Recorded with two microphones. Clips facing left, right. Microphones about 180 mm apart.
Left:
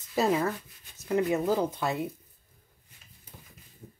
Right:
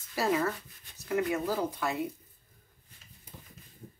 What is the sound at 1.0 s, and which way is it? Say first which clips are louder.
Speech: left 4 dB; 20° left (ahead or behind).